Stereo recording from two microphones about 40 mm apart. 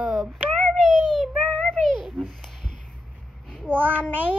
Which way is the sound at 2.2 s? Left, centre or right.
Centre.